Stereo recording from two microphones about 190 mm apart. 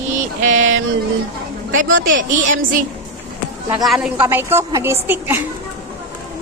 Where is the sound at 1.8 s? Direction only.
90° right.